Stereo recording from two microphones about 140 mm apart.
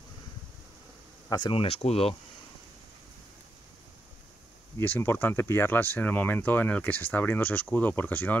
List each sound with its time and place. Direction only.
1.3 s speech: 40° left (ahead or behind)
4.7 s speech: 15° left (ahead or behind)